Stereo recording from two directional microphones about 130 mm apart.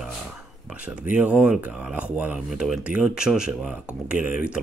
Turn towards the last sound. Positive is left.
turn(degrees=-10)  # may be behind; listen again after turning